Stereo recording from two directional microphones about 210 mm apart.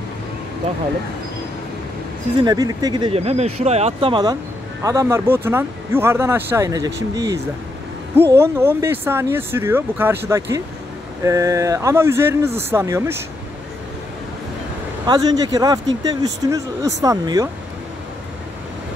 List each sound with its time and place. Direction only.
2.4 s speech: 20° right (ahead or behind)
8.3 s speech: 10° right (ahead or behind)
15.0 s speech: 20° right (ahead or behind)